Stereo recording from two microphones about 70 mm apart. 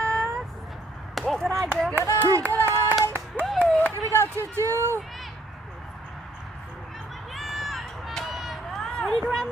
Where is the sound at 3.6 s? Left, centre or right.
Centre.